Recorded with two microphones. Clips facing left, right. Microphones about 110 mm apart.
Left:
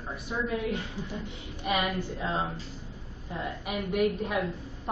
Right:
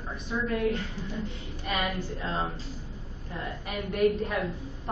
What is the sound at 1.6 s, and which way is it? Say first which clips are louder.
Speech: left 2 dB; 15° left (ahead or behind).